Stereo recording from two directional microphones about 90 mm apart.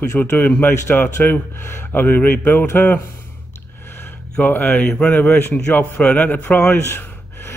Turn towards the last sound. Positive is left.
turn(degrees=25)  # may be behind; listen again after turning